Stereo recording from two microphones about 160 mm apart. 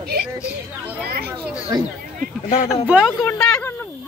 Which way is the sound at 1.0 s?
75° right (ahead or behind).